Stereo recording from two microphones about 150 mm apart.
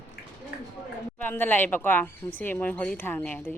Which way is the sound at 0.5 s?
90° left.